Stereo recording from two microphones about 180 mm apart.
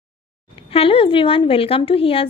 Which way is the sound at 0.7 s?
30° left (ahead or behind).